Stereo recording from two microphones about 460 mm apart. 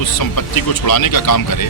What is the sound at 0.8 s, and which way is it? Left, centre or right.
Speech, left.